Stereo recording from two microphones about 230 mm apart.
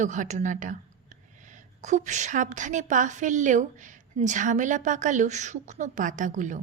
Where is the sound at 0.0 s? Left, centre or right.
Right.